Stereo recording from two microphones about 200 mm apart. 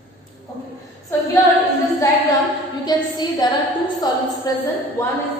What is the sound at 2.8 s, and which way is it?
A woman's voice, 20° left (ahead or behind).